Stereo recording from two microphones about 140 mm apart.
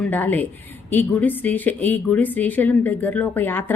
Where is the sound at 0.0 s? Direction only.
10° left (ahead or behind).